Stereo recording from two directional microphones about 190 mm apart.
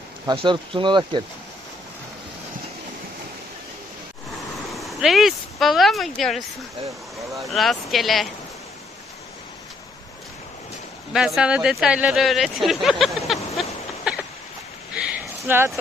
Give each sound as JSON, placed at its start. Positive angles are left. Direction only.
{"t": 0.4, "sound": "speech", "side_deg": -25}
{"t": 4.7, "sound": "speech", "side_deg": 0}
{"t": 11.1, "sound": "speech", "side_deg": 0}
{"t": 15.4, "sound": "speech", "side_deg": -10}